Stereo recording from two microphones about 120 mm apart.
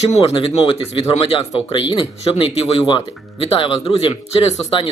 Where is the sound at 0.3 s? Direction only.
45° left (ahead or behind).